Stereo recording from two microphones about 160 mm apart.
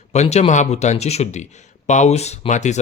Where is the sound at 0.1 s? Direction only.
45° left (ahead or behind).